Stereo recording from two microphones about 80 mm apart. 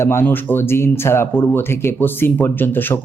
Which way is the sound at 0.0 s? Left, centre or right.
Left.